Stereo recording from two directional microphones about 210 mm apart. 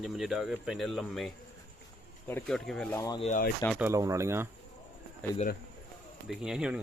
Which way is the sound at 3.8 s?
15° right (ahead or behind).